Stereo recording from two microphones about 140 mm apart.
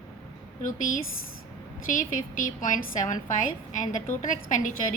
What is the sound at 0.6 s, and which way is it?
A woman's voice, 70° left (ahead or behind).